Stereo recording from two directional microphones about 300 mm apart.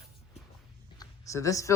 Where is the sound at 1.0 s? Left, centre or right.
Centre.